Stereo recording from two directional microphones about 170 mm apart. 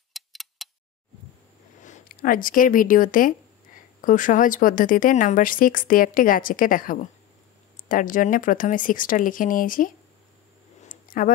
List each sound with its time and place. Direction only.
0.1 s tick: centre (ahead or behind)
1.8 s a woman's voice: 50° left (ahead or behind)
10.9 s a sound: 50° left (ahead or behind)